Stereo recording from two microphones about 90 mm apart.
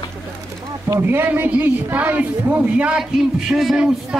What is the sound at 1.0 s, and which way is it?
A man's voice, 20° right (ahead or behind).